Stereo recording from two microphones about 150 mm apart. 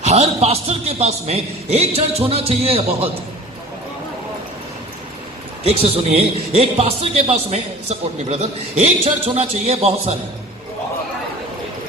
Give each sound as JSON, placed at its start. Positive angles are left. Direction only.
{"t": 0.0, "sound": "a man's voice", "side_deg": -45}
{"t": 5.6, "sound": "a man's voice", "side_deg": -45}